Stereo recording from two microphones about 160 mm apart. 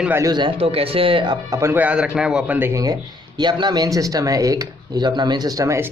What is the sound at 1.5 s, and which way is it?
A man's voice, 15° right (ahead or behind).